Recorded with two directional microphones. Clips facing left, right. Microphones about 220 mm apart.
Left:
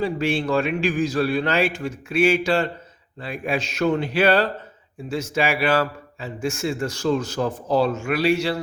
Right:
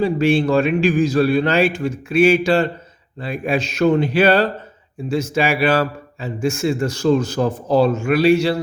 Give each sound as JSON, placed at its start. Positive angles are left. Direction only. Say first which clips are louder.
{"t": 0.0, "sound": "a man's voice", "louder": "right 6 dB", "side_deg": -30}